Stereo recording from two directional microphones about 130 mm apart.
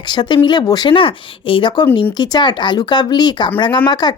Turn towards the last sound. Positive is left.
turn(degrees=35)  # may be behind; listen again after turning